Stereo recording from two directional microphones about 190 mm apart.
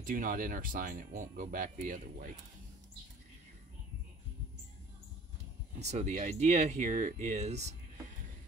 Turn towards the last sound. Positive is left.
turn(degrees=-35)  # may be behind; listen again after turning